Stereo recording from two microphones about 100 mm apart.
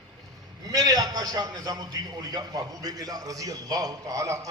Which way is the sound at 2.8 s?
40° right (ahead or behind).